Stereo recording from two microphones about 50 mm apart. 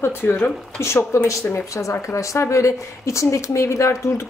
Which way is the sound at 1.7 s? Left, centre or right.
Left.